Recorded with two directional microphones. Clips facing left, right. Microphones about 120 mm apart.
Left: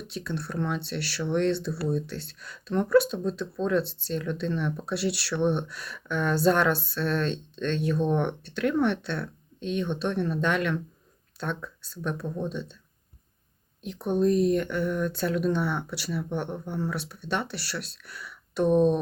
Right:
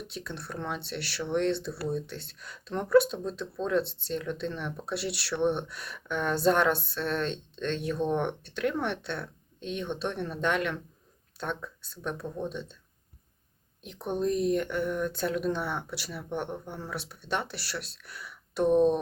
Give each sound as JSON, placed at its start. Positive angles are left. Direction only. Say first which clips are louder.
{"t": 0.1, "sound": "speech", "louder": "left 5 dB", "side_deg": -20}
{"t": 13.8, "sound": "speech", "louder": "left 5 dB", "side_deg": -20}